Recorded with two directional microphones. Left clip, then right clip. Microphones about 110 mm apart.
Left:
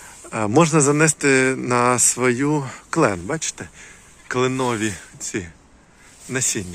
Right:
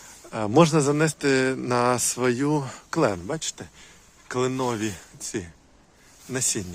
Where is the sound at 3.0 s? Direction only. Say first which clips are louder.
Left 4 dB; 25° right (ahead or behind).